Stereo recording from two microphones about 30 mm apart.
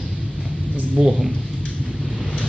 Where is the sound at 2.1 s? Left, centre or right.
Left.